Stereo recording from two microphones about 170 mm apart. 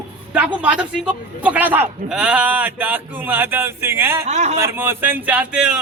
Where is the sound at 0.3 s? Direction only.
5° right (ahead or behind).